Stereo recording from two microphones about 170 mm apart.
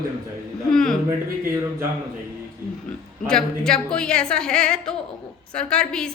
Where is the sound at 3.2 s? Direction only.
5° left (ahead or behind).